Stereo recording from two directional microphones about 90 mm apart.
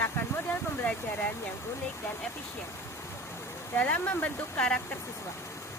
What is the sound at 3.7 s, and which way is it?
Speech, 20° left (ahead or behind).